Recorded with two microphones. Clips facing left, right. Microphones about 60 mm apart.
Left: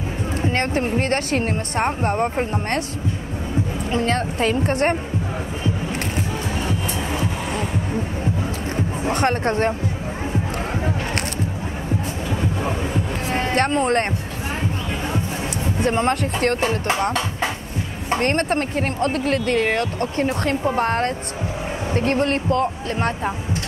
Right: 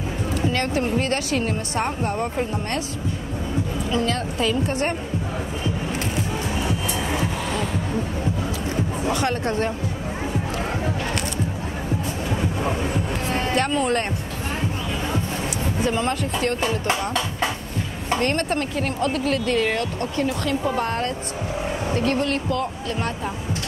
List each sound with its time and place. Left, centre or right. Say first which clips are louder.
0.5 s speech: left 2 dB; left
3.9 s speech: left 3 dB; left
9.1 s speech: left 4 dB; left
12.4 s train: left 1 dB; centre
13.3 s a sound: left 2 dB; left
13.6 s speech: left 4 dB; left
15.8 s speech: left 4 dB; left